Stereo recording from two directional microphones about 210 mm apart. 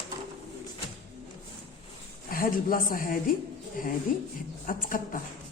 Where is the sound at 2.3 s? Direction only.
40° left (ahead or behind).